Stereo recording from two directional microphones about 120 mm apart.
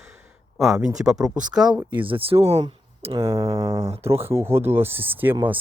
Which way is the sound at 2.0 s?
50° right (ahead or behind).